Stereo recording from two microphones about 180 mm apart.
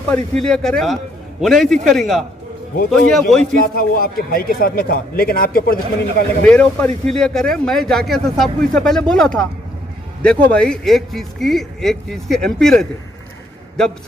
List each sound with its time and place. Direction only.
0.1 s a man's voice: 5° left (ahead or behind)
3.6 s speech: 55° left (ahead or behind)
6.4 s a man's voice: 5° left (ahead or behind)